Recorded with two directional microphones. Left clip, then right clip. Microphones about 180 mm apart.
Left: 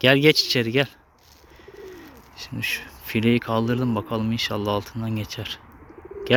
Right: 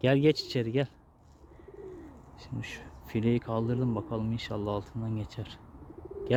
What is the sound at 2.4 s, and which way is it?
Speech, 5° left (ahead or behind).